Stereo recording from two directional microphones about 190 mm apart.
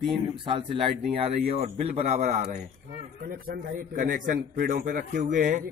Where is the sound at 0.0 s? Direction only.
25° right (ahead or behind).